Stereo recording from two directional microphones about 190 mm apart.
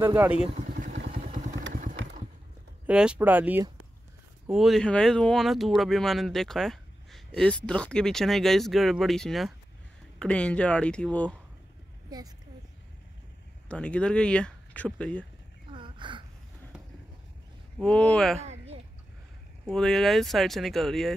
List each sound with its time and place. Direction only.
0.0 s speech: 10° right (ahead or behind)
0.7 s vehicle: 45° right (ahead or behind)
0.9 s vehicle: 60° right (ahead or behind)
1.2 s vehicle: 40° right (ahead or behind)
1.7 s motorcycle: 45° right (ahead or behind)
2.9 s speech: 5° right (ahead or behind)
12.1 s a child's voice: 20° right (ahead or behind)
13.7 s speech: 5° left (ahead or behind)
15.7 s a sound: 25° right (ahead or behind)
17.7 s speech: 5° left (ahead or behind)
18.4 s a sound: 35° right (ahead or behind)
19.6 s speech: centre (ahead or behind)